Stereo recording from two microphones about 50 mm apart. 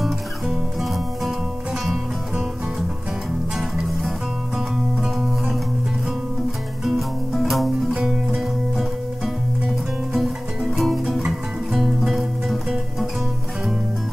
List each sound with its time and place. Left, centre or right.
0.0 s music: centre
3.5 s music: centre
6.8 s music: centre